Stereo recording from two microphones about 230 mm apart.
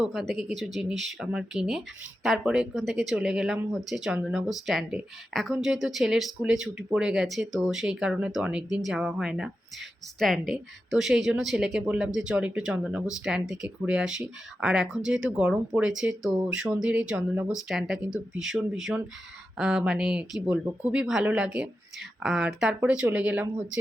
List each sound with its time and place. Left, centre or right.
0.3 s speech: centre
19.5 s speech: centre